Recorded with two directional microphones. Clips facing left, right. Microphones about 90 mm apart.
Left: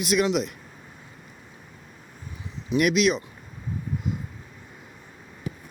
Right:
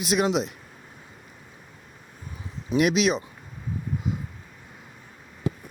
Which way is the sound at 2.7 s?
35° right (ahead or behind).